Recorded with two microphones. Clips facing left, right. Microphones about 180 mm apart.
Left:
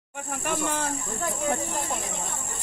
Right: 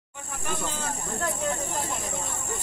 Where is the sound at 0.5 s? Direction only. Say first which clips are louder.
Left 4 dB; 65° left (ahead or behind).